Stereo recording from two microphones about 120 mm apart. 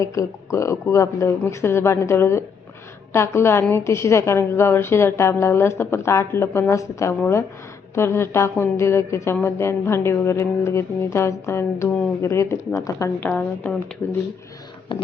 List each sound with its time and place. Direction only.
0.0 s a woman's voice: 25° left (ahead or behind)
13.1 s speech: 15° left (ahead or behind)
14.9 s speech: 45° left (ahead or behind)